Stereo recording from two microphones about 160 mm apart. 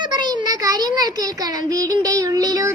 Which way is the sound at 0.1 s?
25° right (ahead or behind).